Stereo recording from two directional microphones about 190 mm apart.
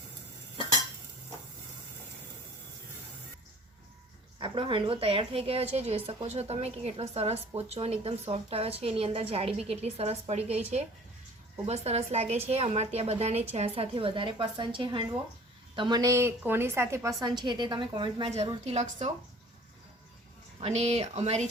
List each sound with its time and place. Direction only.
4.4 s a woman's voice: 25° right (ahead or behind)
20.6 s a woman's voice: 35° right (ahead or behind)